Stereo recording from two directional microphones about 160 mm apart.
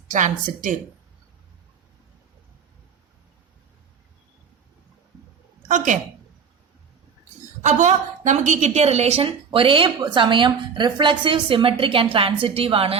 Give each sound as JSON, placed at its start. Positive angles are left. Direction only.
{"t": 0.1, "sound": "a woman's voice", "side_deg": -55}
{"t": 5.6, "sound": "a woman's voice", "side_deg": -50}
{"t": 7.6, "sound": "a woman's voice", "side_deg": -50}